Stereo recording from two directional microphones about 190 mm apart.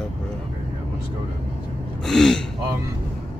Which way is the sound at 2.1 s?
Centre (ahead or behind).